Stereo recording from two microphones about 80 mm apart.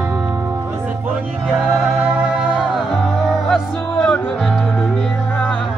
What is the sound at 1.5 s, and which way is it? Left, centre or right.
Music, centre.